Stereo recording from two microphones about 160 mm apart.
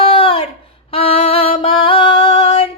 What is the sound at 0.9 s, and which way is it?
Music, 35° left (ahead or behind).